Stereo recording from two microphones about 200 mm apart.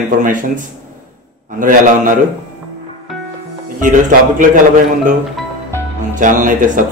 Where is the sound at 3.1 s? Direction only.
Centre (ahead or behind).